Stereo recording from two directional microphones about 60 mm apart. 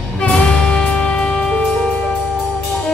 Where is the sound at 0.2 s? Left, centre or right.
Left.